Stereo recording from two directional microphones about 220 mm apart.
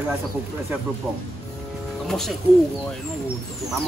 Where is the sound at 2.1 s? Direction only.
Centre (ahead or behind).